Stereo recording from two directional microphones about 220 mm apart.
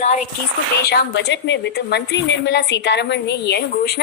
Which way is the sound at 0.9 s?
50° left (ahead or behind).